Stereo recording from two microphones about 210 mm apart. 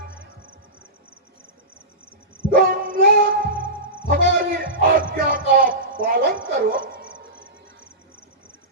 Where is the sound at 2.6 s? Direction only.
40° right (ahead or behind).